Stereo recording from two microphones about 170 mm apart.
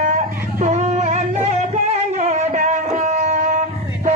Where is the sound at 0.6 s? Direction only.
40° right (ahead or behind).